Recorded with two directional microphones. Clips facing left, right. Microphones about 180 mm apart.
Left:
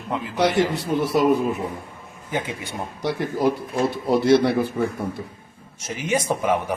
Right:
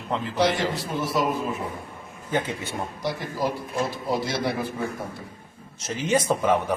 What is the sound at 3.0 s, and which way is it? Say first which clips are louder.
Speech: left 7 dB; 65° left (ahead or behind).